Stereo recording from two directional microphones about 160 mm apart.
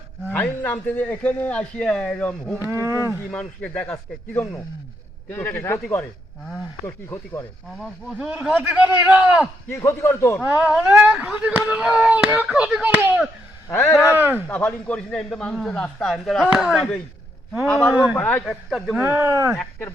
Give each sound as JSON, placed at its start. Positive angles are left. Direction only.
{"t": 0.3, "sound": "a man's voice", "side_deg": 10}
{"t": 2.6, "sound": "speech", "side_deg": -15}
{"t": 3.2, "sound": "a man's voice", "side_deg": 5}
{"t": 5.3, "sound": "a man's voice", "side_deg": 10}
{"t": 7.8, "sound": "speech", "side_deg": -5}
{"t": 9.6, "sound": "a man's voice", "side_deg": 15}
{"t": 10.6, "sound": "speech", "side_deg": -5}
{"t": 14.4, "sound": "a man's voice", "side_deg": 10}
{"t": 17.9, "sound": "speech", "side_deg": -10}
{"t": 18.2, "sound": "a man's voice", "side_deg": 10}
{"t": 18.9, "sound": "speech", "side_deg": -15}